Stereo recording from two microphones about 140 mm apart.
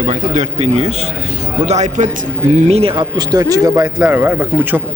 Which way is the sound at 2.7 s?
45° right (ahead or behind).